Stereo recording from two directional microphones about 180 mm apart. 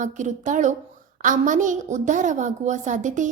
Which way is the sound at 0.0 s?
45° right (ahead or behind).